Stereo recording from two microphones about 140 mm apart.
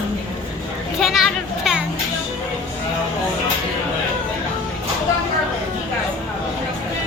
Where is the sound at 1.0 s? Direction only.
Centre (ahead or behind).